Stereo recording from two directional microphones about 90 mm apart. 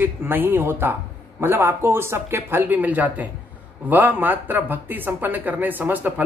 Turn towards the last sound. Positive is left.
turn(degrees=-20)  # may be behind; listen again after turning